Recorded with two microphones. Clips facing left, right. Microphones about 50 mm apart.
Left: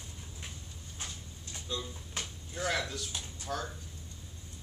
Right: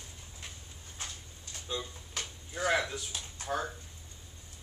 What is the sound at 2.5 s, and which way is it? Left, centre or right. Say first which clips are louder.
Speech: right 4 dB; centre.